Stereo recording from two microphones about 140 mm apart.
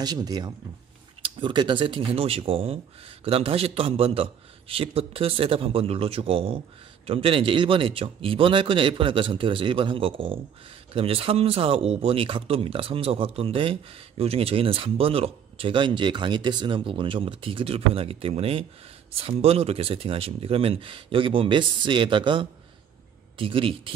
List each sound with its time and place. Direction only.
0.0 s a man's voice: 30° right (ahead or behind)